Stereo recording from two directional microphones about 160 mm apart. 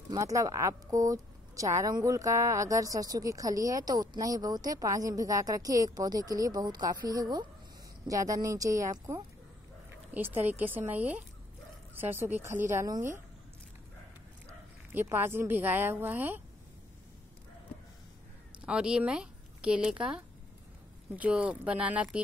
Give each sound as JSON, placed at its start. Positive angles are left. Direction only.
{"t": 0.1, "sound": "speech", "side_deg": -20}
{"t": 14.9, "sound": "speech", "side_deg": -15}
{"t": 18.7, "sound": "speech", "side_deg": -5}